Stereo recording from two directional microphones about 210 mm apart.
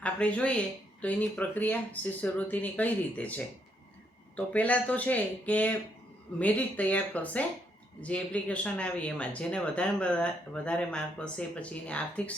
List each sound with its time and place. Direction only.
0.0 s speech: 5° left (ahead or behind)